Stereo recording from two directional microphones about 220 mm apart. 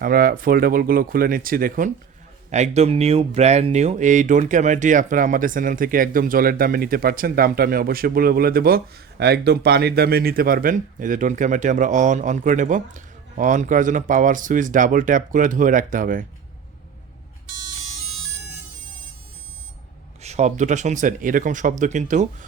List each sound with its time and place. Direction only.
0.0 s speech: 40° right (ahead or behind)
20.2 s speech: 30° right (ahead or behind)